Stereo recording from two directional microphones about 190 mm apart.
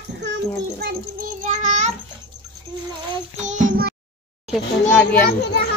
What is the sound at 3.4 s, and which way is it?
Child singing, 40° right (ahead or behind).